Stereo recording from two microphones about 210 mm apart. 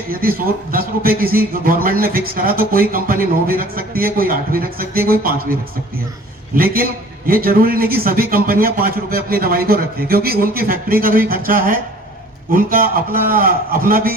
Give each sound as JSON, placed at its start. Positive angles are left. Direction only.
{"t": 0.1, "sound": "a man's voice", "side_deg": -45}
{"t": 7.3, "sound": "a man's voice", "side_deg": -45}